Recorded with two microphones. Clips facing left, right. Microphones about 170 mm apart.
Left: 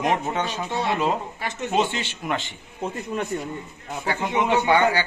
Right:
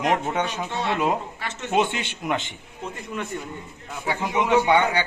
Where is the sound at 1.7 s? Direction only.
15° right (ahead or behind).